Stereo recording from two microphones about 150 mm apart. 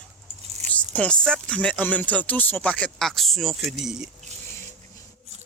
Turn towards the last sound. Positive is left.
turn(degrees=-5)  # may be behind; listen again after turning